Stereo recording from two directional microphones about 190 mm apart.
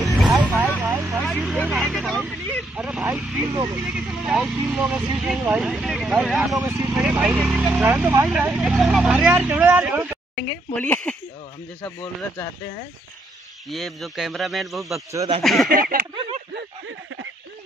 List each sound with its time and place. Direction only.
0.0 s vehicle: centre (ahead or behind)
1.2 s speech: centre (ahead or behind)
3.4 s speech: 25° right (ahead or behind)
3.8 s speech: centre (ahead or behind)
6.6 s speech: 20° right (ahead or behind)
6.9 s speech: 5° right (ahead or behind)
10.8 s speech: 10° left (ahead or behind)
13.7 s speech: centre (ahead or behind)
15.7 s speech: 50° right (ahead or behind)
16.5 s a sound: 90° right